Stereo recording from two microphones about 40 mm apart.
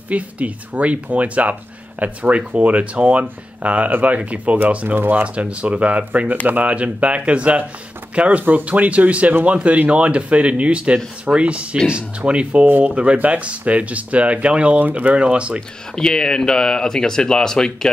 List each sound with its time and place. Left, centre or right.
0.1 s speech: right
4.8 s speech: right
5.1 s speech: right
6.7 s speech: right
14.8 s speech: right
15.1 s speech: right
15.9 s speech: centre